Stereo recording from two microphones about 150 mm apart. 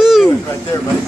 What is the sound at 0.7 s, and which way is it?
Speech, 20° left (ahead or behind).